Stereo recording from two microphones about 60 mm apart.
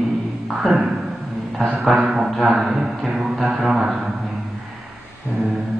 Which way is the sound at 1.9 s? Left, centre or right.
Centre.